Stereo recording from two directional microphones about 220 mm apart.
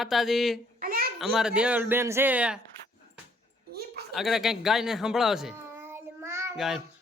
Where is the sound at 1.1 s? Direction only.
Centre (ahead or behind).